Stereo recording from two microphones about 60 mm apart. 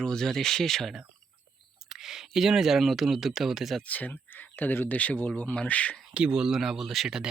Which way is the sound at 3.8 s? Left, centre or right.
Left.